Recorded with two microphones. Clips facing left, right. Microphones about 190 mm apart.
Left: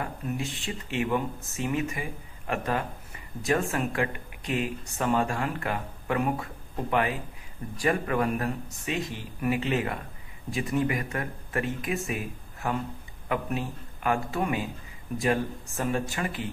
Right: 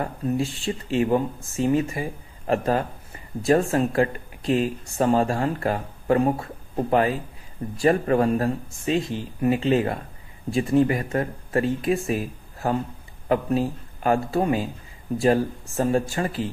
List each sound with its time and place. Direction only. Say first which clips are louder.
0.0 s speech: right 7 dB; 35° right (ahead or behind)